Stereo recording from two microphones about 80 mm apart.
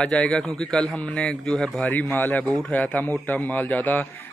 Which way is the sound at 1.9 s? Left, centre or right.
Left.